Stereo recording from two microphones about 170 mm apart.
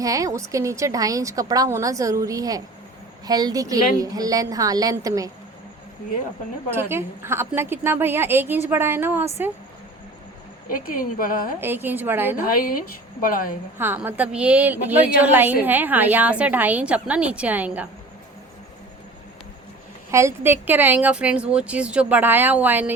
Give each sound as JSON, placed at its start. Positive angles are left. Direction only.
{"t": 0.0, "sound": "a woman's voice", "side_deg": -20}
{"t": 6.7, "sound": "a woman's voice", "side_deg": -15}
{"t": 10.7, "sound": "speech", "side_deg": 55}
{"t": 11.6, "sound": "a woman's voice", "side_deg": -10}
{"t": 12.5, "sound": "speech", "side_deg": 60}
{"t": 13.7, "sound": "a woman's voice", "side_deg": -10}
{"t": 20.1, "sound": "a woman's voice", "side_deg": -15}